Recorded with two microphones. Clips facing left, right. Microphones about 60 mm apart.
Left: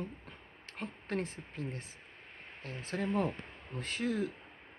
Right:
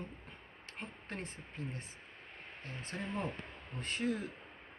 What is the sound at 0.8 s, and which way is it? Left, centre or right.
Speech, left.